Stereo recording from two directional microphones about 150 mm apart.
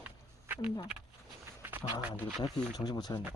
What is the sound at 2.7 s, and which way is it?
Speech, 25° left (ahead or behind).